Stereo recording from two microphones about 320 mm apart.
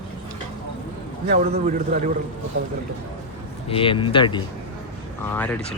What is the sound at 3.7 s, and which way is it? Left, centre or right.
Speech, centre.